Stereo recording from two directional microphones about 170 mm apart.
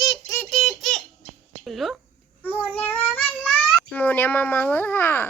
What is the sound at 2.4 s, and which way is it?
Child singing, 10° left (ahead or behind).